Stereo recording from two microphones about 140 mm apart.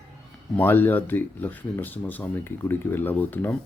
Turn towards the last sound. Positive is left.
turn(degrees=15)  # may be behind; listen again after turning